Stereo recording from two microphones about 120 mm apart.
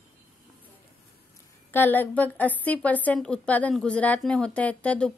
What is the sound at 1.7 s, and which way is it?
A woman's voice, 15° left (ahead or behind).